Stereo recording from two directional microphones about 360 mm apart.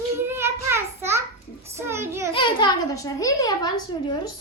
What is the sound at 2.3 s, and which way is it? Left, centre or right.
A child's voice, centre.